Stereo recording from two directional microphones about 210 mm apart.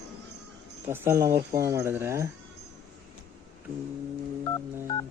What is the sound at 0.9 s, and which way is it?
Speech, 15° right (ahead or behind).